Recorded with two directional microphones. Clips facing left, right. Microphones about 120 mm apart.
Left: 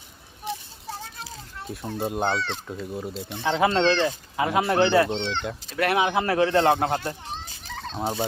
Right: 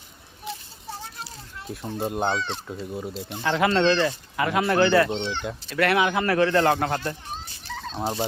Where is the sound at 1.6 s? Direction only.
Centre (ahead or behind).